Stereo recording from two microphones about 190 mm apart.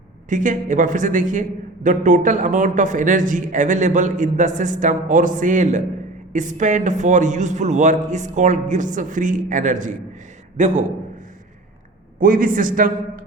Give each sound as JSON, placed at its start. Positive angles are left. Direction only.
{"t": 0.3, "sound": "a man's voice", "side_deg": -40}
{"t": 12.2, "sound": "a man's voice", "side_deg": -45}